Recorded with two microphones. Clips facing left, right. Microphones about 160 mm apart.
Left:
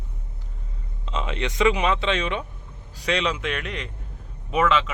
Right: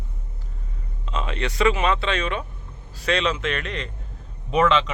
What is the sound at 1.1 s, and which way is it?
A man's voice, 20° left (ahead or behind).